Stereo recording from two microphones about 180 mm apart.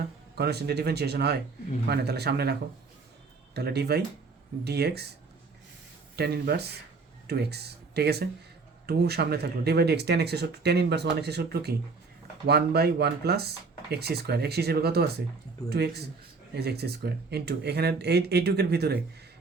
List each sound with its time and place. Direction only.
0.3 s speech: 65° right (ahead or behind)
6.1 s speech: 65° right (ahead or behind)